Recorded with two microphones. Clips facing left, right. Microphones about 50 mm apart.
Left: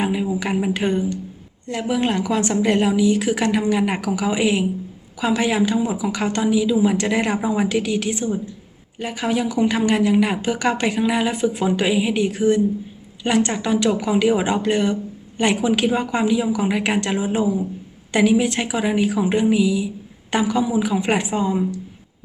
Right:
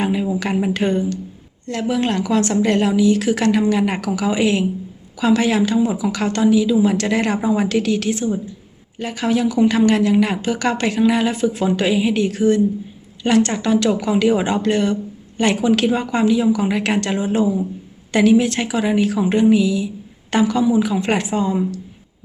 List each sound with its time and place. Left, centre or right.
0.0 s speech: centre
1.8 s speech: centre
6.1 s speech: centre
7.7 s speech: centre